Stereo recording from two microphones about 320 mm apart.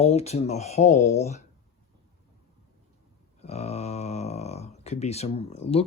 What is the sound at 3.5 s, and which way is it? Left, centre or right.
Speech, centre.